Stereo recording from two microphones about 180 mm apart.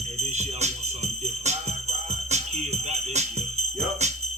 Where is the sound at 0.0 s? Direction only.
40° right (ahead or behind).